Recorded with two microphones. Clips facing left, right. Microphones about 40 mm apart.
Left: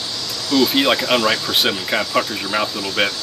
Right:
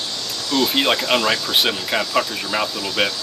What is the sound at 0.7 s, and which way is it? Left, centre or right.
Speech, centre.